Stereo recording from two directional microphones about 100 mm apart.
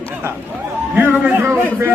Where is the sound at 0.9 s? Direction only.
20° right (ahead or behind).